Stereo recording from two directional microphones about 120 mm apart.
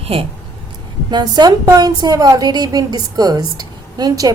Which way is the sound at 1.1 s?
35° right (ahead or behind).